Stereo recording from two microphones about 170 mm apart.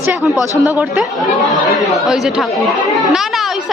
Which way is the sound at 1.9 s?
Centre (ahead or behind).